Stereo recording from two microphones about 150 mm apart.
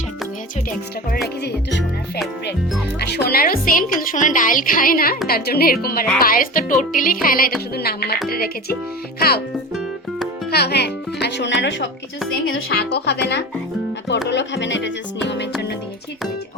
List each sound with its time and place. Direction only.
3.0 s a woman's voice: 90° left; by 5.1 s 75° left (ahead or behind)
5.3 s speech: 90° left
5.8 s a woman's voice: 80° left
7.8 s speech: 90° left
10.5 s speech: 90° left
12.6 s speech: 90° left